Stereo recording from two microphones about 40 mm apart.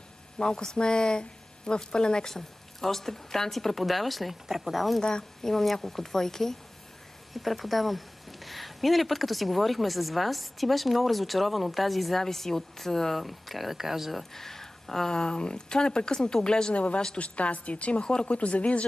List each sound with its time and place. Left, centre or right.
0.4 s a woman's voice: centre
5.0 s speech: left
5.5 s a woman's voice: centre
7.3 s speech: centre
14.3 s a woman's voice: centre
16.7 s speech: left